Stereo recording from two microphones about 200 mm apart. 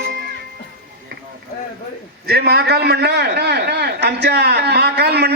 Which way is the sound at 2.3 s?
50° right (ahead or behind).